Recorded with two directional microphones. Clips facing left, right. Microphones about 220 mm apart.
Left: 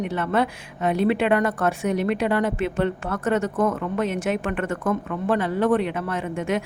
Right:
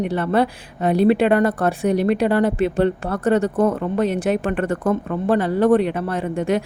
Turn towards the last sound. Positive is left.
turn(degrees=-35)  # may be behind; listen again after turning